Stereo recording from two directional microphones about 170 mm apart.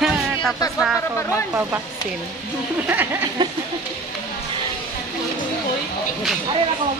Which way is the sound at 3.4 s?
25° right (ahead or behind).